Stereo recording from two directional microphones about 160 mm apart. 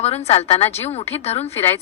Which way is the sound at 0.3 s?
40° left (ahead or behind).